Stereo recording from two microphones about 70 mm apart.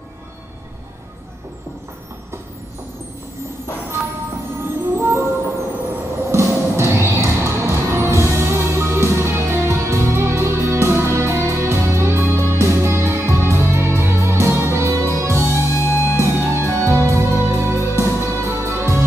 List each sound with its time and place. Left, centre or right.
4.6 s music: right
6.3 s music: right
15.7 s music: left
16.2 s music: right